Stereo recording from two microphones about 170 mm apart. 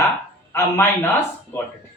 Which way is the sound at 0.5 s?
15° left (ahead or behind).